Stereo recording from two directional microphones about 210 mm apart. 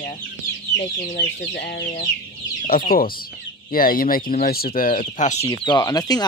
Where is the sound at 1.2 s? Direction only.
55° left (ahead or behind).